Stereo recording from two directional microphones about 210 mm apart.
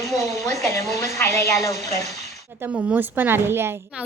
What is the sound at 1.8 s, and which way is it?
Speech, 30° right (ahead or behind).